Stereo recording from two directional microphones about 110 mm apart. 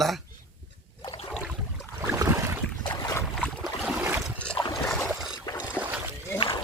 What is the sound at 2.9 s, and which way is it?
Boat, 35° left (ahead or behind).